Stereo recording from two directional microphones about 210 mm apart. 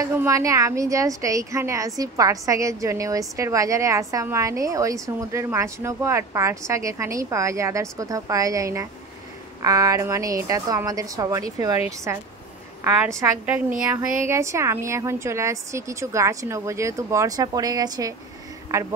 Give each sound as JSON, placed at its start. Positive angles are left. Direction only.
{"t": 0.0, "sound": "a woman's voice", "side_deg": -15}